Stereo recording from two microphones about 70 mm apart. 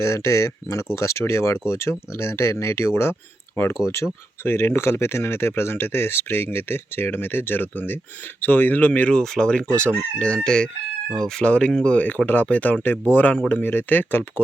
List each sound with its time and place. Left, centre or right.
0.0 s speech: left